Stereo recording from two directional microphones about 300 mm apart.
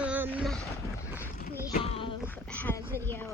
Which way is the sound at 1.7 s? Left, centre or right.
Centre.